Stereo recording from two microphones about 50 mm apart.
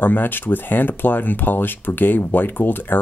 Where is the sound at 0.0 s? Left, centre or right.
Left.